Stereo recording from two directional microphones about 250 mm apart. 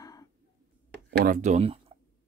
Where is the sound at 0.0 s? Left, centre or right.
Centre.